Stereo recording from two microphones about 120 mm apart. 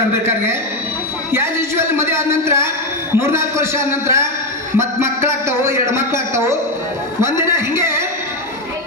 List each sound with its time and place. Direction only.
1.3 s a man's voice: 20° right (ahead or behind)